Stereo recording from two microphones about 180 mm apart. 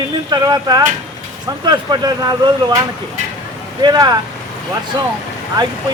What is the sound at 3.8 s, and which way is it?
Speech, 20° right (ahead or behind).